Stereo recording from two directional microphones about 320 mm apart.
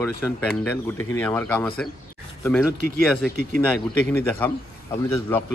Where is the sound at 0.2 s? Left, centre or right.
Centre.